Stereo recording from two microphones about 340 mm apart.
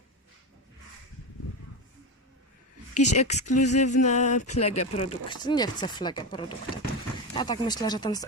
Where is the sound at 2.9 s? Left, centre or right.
Left.